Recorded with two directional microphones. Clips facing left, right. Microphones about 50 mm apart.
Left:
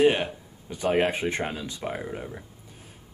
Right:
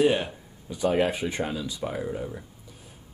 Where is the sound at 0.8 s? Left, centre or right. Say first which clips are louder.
Even; left.